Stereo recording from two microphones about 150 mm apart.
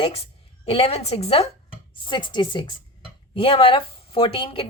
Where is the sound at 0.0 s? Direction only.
40° left (ahead or behind).